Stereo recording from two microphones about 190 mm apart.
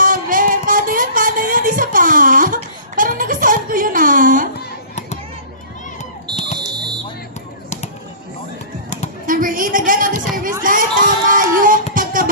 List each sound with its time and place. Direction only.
0.0 s music: 45° right (ahead or behind)
6.0 s fire alarm: 40° left (ahead or behind)
9.2 s a sound: 45° right (ahead or behind)